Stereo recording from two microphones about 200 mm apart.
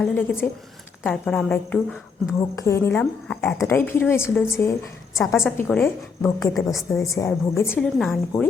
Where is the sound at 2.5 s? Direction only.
15° left (ahead or behind).